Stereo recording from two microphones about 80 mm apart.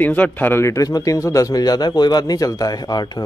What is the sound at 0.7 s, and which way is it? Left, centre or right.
Speech, left.